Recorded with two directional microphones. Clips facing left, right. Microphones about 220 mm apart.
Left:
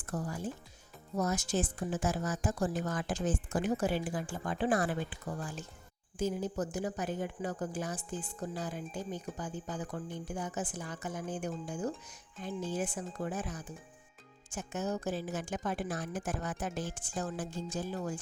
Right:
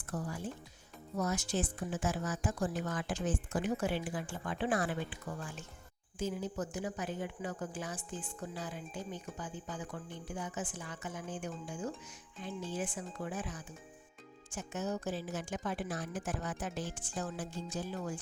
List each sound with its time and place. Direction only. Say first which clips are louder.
0.0 s a woman's voice: left 2 dB; 45° left (ahead or behind)